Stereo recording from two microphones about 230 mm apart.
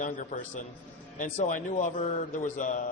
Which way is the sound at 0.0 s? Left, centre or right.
Left.